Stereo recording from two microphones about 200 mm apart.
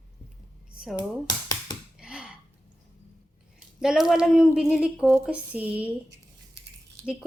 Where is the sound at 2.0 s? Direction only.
5° right (ahead or behind).